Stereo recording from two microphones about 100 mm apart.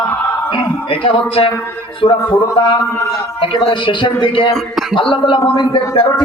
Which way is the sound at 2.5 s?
55° left (ahead or behind).